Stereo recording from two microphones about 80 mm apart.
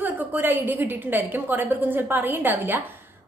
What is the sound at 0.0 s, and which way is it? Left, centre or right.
A woman's voice, right.